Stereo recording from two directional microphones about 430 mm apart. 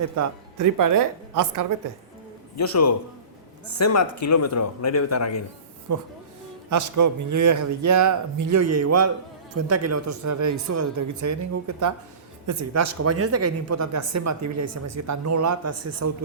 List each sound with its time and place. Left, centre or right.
0.2 s a woman's voice: right
2.6 s speech: left
5.9 s speech: right